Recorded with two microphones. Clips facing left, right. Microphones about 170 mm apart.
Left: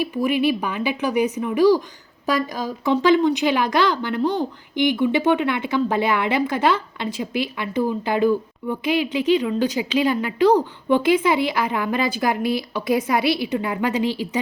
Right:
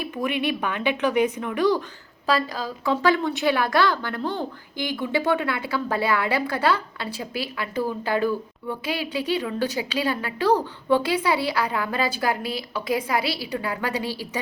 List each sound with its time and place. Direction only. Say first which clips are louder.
0.0 s a woman's voice: left 6 dB; 5° left (ahead or behind)